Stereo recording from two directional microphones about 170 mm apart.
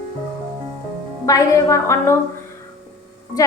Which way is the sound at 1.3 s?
20° left (ahead or behind).